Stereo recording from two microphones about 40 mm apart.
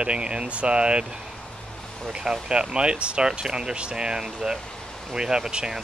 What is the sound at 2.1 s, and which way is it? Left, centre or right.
Speech, centre.